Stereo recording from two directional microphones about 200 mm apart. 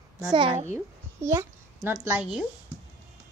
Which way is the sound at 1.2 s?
15° right (ahead or behind).